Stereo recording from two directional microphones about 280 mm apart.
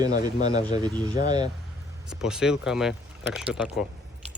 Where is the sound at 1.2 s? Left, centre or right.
Centre.